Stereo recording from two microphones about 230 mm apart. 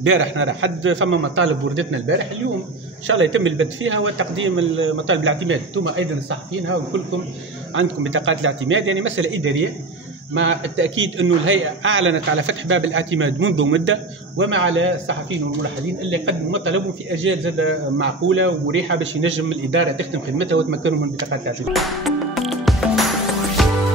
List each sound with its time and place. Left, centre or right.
0.0 s a man's voice: right
7.7 s a man's voice: right
21.7 s music: centre